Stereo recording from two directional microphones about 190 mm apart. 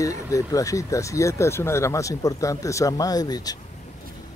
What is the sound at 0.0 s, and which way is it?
Speech, 15° left (ahead or behind).